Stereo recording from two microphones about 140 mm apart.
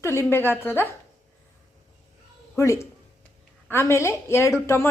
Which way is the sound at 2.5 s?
20° left (ahead or behind).